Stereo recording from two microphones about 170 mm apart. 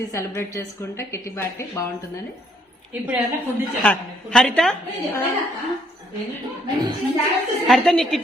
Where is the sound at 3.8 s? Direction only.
5° left (ahead or behind).